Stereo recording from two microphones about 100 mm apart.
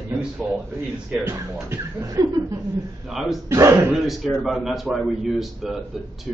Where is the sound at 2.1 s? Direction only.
45° right (ahead or behind).